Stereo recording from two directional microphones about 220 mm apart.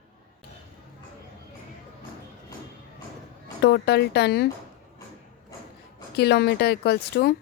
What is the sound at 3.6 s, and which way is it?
Speech, 50° left (ahead or behind).